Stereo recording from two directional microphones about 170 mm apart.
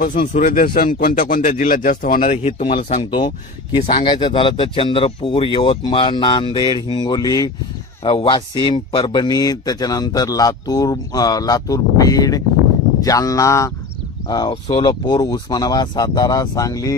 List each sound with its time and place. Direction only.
0.0 s speech: 55° left (ahead or behind)
2.3 s speech: 35° left (ahead or behind); by 16.9 s 20° left (ahead or behind)